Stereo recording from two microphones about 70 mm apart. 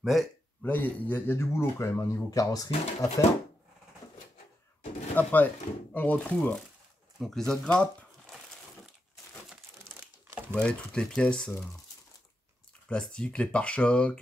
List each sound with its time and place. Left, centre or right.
0.0 s speech: centre
0.6 s speech: left
2.3 s speech: left
5.1 s speech: left; by 7.5 s centre
7.6 s speech: centre
10.5 s speech: centre
12.8 s speech: centre